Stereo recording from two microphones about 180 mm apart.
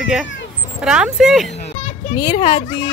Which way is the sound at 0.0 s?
5° right (ahead or behind).